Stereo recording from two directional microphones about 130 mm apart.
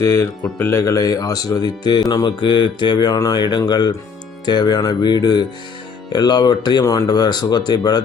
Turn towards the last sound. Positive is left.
turn(degrees=35)  # may be behind; listen again after turning